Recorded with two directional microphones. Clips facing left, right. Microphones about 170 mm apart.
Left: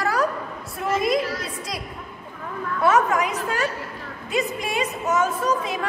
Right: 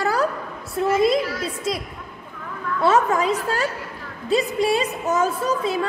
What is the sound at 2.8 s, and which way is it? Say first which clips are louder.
A woman's voice: right 1 dB; 30° right (ahead or behind).